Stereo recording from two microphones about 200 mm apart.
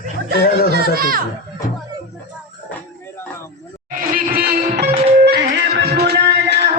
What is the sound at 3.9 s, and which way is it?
Music, 45° right (ahead or behind).